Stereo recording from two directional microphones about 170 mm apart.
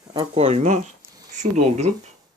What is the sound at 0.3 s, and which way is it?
Speech, 40° right (ahead or behind).